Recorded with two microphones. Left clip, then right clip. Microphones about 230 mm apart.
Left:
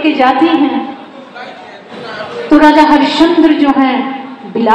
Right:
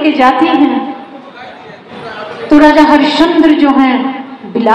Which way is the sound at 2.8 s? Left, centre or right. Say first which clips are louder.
Right 1 dB; right.